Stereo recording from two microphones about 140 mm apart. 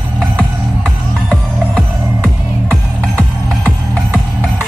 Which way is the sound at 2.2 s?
5° left (ahead or behind).